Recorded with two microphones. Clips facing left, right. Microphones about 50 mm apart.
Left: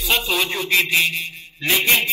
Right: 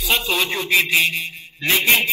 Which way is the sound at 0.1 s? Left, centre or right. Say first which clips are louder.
Even; centre.